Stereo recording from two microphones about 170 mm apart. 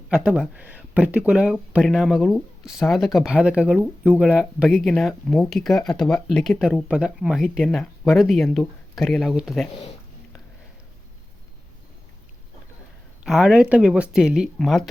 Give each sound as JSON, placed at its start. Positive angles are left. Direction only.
{"t": 0.1, "sound": "speech", "side_deg": -5}
{"t": 13.2, "sound": "speech", "side_deg": -5}